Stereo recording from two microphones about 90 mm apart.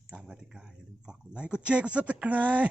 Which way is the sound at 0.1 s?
10° right (ahead or behind).